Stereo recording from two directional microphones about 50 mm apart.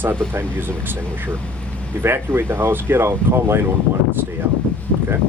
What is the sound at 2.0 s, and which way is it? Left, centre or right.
Speech, right.